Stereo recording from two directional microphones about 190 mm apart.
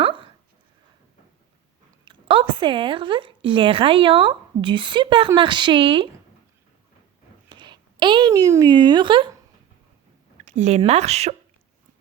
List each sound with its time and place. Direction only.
2.0 s speech: 25° right (ahead or behind)
7.5 s a woman's voice: 25° right (ahead or behind)
10.4 s speech: 35° right (ahead or behind)